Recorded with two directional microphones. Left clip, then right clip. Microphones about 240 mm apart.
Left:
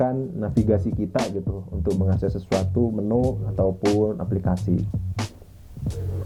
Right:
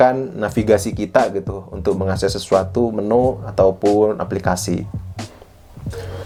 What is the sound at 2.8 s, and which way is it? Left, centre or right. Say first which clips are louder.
Speech: right 7 dB; right.